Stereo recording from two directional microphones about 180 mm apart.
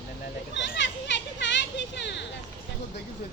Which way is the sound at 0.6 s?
85° left.